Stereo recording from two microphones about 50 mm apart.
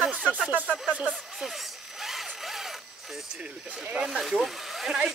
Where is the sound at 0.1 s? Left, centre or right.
Right.